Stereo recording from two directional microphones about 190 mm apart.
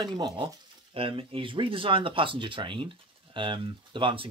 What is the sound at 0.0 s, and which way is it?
Speech, 25° right (ahead or behind).